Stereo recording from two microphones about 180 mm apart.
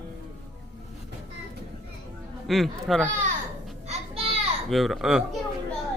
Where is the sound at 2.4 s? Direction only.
Centre (ahead or behind).